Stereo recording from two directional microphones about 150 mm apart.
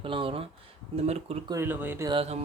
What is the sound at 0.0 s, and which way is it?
Speech, 35° right (ahead or behind).